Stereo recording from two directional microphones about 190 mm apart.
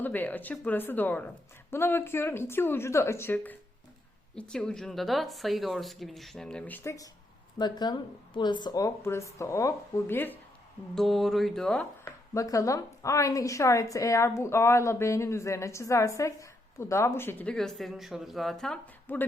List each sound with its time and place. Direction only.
0.0 s a woman's voice: 10° left (ahead or behind)
10.9 s speech: centre (ahead or behind)